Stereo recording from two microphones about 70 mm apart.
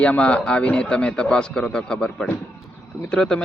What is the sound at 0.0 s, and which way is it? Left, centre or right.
Speech, centre.